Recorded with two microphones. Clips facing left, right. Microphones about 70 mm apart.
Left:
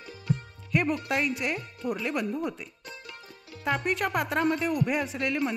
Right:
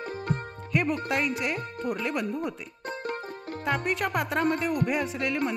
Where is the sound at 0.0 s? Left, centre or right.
Right.